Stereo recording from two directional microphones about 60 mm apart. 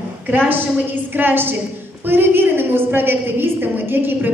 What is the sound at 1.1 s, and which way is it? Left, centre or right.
A woman's voice, right.